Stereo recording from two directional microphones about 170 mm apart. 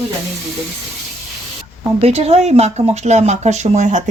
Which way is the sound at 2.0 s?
35° right (ahead or behind).